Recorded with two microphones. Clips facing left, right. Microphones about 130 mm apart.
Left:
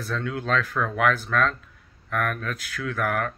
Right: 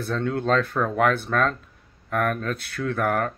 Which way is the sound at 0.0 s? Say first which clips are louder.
Right 4 dB; 35° right (ahead or behind).